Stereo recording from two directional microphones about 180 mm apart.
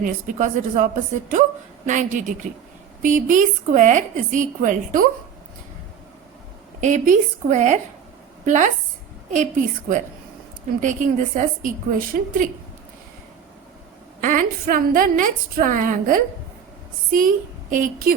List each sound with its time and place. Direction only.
0.0 s a woman's voice: 45° right (ahead or behind)
1.9 s a woman's voice: 45° right (ahead or behind)
6.8 s a woman's voice: 45° right (ahead or behind)
9.3 s a woman's voice: 45° right (ahead or behind)
14.2 s a woman's voice: 45° right (ahead or behind)